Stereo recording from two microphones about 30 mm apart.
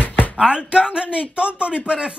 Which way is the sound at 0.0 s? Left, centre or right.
Left.